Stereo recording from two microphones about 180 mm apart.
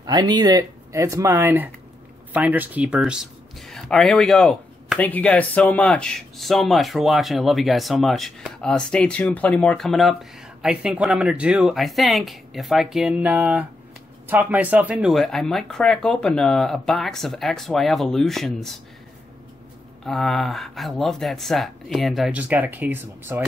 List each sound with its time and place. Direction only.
0.0 s speech: 25° right (ahead or behind); by 18.8 s centre (ahead or behind)
20.1 s speech: centre (ahead or behind)